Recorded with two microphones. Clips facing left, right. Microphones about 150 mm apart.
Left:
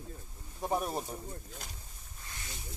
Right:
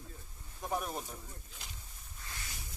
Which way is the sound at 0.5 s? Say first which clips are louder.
Left 4 dB; 35° left (ahead or behind).